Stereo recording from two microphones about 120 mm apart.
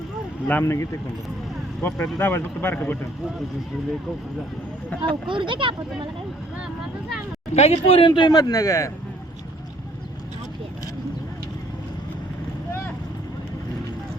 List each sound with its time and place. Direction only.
0.4 s speech: 15° left (ahead or behind)
5.0 s speech: 45° right (ahead or behind)
7.5 s speech: 60° left (ahead or behind); by 8.3 s 45° left (ahead or behind)
8.3 s speech: 30° left (ahead or behind)